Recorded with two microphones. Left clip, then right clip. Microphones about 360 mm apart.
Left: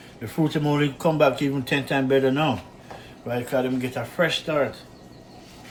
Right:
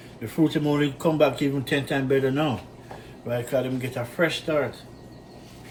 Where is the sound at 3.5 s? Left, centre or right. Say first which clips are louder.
Left 3 dB; left.